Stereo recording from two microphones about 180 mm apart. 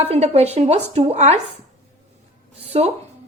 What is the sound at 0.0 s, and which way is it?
A woman's voice, 35° right (ahead or behind).